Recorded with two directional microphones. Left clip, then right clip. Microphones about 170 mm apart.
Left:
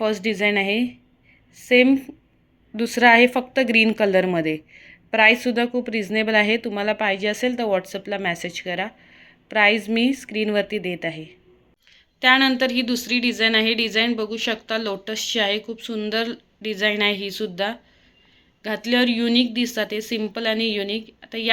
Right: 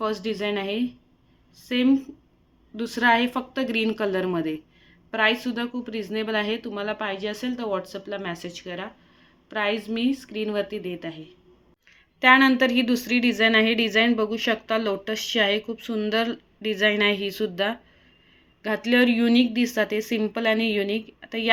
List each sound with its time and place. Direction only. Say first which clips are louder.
0.0 s a woman's voice: left 6 dB; 30° left (ahead or behind)
12.2 s a woman's voice: even; 10° right (ahead or behind)